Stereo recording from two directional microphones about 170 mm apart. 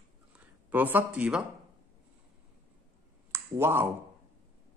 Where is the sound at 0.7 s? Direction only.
10° right (ahead or behind).